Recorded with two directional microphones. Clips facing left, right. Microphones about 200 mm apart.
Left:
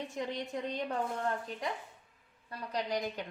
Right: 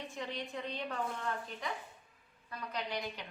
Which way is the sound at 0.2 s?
45° left (ahead or behind).